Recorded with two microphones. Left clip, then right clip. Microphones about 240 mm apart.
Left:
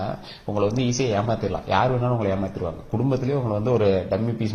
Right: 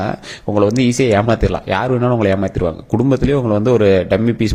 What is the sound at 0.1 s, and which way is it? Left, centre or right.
Speech, right.